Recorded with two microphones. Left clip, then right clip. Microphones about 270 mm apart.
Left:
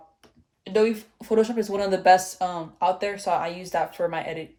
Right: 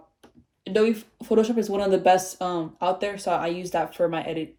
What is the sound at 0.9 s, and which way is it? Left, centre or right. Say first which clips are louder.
Speech: even; left.